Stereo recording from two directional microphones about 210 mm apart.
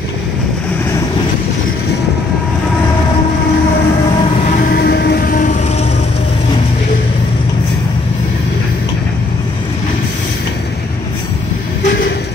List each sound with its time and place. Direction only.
4.7 s music: 50° left (ahead or behind)